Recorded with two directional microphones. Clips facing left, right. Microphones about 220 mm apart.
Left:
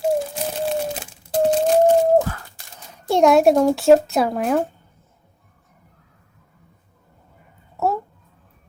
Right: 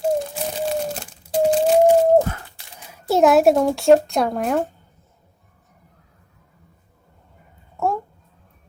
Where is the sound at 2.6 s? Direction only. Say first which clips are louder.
Even; 45° left (ahead or behind).